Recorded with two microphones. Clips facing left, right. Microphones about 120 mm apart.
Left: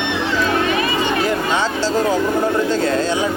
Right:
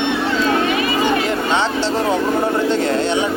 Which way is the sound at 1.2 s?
20° right (ahead or behind).